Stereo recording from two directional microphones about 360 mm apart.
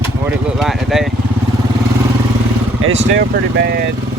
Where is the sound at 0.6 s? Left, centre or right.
Centre.